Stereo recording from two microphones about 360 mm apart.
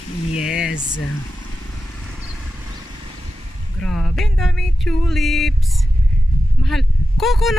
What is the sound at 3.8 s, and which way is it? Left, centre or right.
Speech, centre.